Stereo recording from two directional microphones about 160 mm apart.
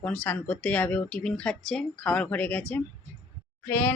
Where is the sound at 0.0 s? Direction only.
10° left (ahead or behind).